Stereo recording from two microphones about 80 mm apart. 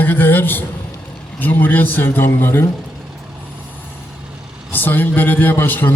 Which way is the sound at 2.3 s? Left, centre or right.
Left.